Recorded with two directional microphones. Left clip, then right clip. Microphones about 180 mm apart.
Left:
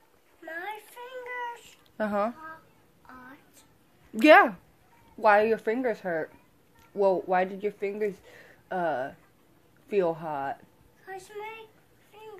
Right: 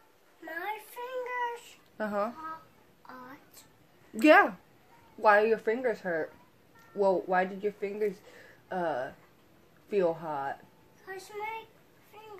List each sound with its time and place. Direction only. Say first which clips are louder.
0.5 s child singing: even; centre (ahead or behind)
2.0 s speech: left 4 dB; 45° left (ahead or behind)
3.1 s a sound: right 1 dB; centre (ahead or behind)
4.2 s speech: left 4 dB; 50° left (ahead or behind)
11.1 s a woman's voice: right 1 dB; 5° left (ahead or behind)
12.1 s a sound: left 3 dB; 5° left (ahead or behind)